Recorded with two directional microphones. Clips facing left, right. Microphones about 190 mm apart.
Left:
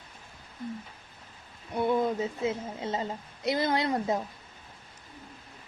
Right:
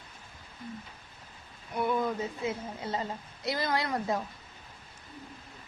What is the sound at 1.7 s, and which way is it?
A woman's voice, 25° left (ahead or behind).